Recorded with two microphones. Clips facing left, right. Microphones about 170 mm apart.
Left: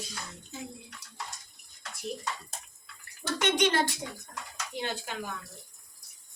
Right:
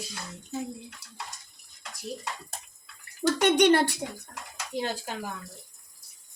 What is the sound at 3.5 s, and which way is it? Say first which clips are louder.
Speech: right 5 dB; 60° right (ahead or behind).